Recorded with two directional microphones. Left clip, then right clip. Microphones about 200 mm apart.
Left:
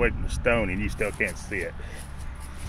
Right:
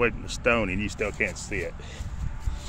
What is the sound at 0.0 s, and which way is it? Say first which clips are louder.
Speech: even; 10° right (ahead or behind).